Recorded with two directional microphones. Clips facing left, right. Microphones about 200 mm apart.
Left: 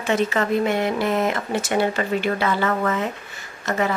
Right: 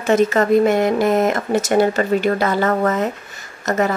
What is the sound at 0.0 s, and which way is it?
Speech, 45° right (ahead or behind).